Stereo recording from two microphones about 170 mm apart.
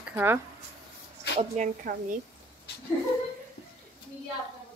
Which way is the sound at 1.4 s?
45° right (ahead or behind).